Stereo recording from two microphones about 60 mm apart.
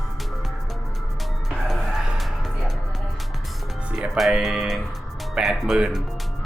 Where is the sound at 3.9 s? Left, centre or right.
Centre.